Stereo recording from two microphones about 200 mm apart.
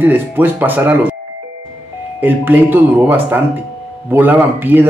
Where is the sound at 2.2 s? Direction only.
10° right (ahead or behind).